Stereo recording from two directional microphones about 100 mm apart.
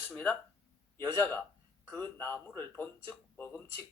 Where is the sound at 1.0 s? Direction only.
25° left (ahead or behind).